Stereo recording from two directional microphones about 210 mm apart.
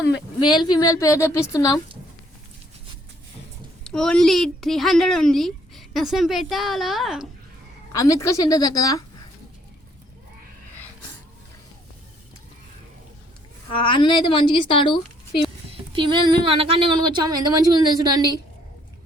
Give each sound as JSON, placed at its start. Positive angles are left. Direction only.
{"t": 0.5, "sound": "a woman's voice", "side_deg": 20}
{"t": 3.8, "sound": "a woman's voice", "side_deg": 5}
{"t": 7.9, "sound": "a woman's voice", "side_deg": 15}
{"t": 13.7, "sound": "a woman's voice", "side_deg": 25}
{"t": 15.7, "sound": "speech", "side_deg": -25}